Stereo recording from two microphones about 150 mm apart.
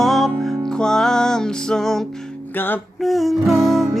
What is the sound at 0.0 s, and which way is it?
Music, centre (ahead or behind).